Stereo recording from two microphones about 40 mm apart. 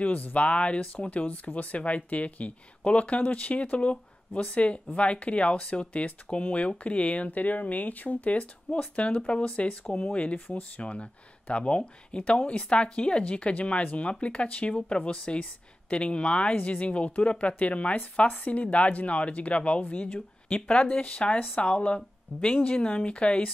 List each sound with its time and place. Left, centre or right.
0.0 s speech: left
9.8 s speech: left
10.3 s speech: left
20.4 s speech: left
20.8 s speech: left